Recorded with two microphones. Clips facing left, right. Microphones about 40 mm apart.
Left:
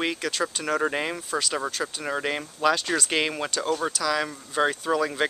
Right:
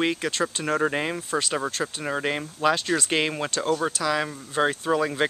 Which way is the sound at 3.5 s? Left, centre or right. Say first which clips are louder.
Right 2 dB; right.